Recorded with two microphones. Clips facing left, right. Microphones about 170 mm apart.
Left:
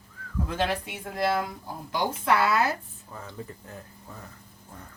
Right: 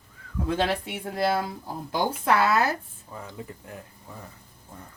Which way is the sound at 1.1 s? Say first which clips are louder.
Right 1 dB; 30° right (ahead or behind).